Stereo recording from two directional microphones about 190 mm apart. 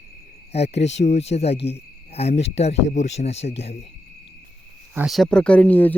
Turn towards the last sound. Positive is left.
turn(degrees=10)  # may be behind; listen again after turning